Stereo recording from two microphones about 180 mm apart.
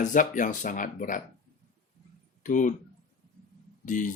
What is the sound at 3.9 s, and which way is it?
Speech, 45° left (ahead or behind).